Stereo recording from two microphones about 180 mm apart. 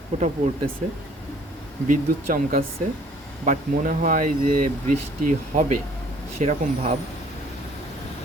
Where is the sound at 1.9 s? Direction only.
50° right (ahead or behind).